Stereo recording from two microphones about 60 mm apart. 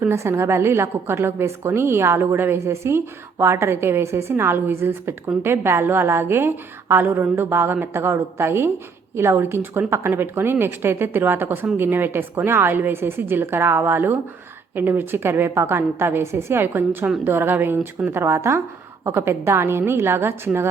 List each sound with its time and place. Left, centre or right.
0.1 s a woman's voice: right